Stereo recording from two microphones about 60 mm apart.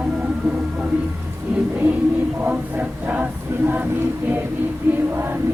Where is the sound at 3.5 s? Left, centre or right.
Right.